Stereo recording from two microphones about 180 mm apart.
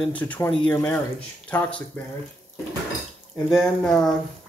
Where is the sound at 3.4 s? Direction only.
Centre (ahead or behind).